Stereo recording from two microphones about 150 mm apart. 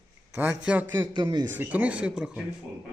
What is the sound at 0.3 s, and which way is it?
Speech, 10° right (ahead or behind).